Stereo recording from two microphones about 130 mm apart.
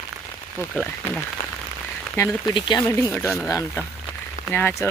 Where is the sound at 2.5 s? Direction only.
35° left (ahead or behind).